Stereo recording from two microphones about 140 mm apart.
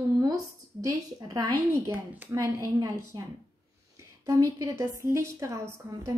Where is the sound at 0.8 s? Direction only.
25° right (ahead or behind).